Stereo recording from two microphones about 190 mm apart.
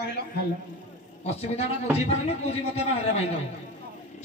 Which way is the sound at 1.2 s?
35° left (ahead or behind).